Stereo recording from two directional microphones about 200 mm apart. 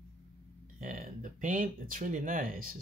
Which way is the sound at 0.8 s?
40° right (ahead or behind).